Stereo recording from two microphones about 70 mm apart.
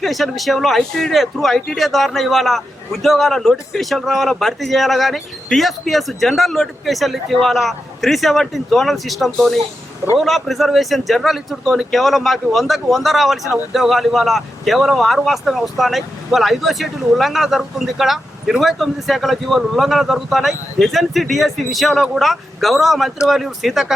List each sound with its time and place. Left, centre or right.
0.0 s speech: centre